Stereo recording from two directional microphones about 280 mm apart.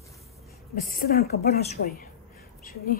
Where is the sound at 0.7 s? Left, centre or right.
Left.